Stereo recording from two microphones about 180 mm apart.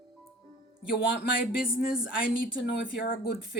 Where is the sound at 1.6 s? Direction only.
50° left (ahead or behind).